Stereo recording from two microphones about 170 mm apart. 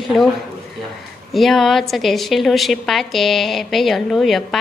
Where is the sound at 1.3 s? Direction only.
Centre (ahead or behind).